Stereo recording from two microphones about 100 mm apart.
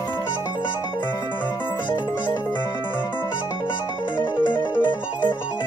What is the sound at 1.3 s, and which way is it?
Music, 20° left (ahead or behind).